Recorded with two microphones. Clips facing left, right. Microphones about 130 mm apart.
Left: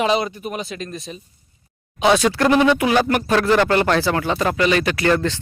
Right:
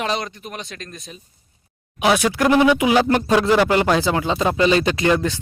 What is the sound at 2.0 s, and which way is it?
Speech, 10° right (ahead or behind).